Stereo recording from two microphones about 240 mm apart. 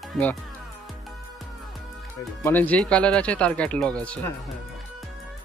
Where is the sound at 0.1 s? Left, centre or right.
Centre.